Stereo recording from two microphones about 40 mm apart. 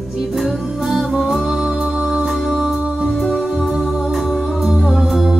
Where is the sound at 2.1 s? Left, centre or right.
Centre.